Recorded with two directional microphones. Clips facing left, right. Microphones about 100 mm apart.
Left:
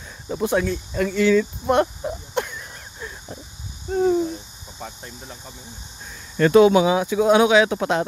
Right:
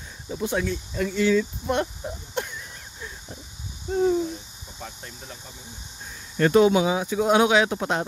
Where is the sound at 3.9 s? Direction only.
40° left (ahead or behind).